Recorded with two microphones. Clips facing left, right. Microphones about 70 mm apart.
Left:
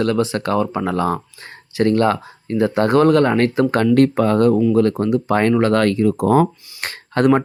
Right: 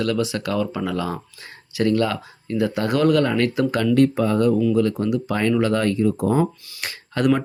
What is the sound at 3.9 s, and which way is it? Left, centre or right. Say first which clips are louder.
Speech: left 2 dB; left.